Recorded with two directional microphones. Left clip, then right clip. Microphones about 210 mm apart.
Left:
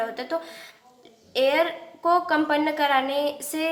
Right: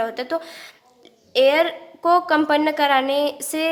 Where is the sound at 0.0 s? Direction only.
45° right (ahead or behind).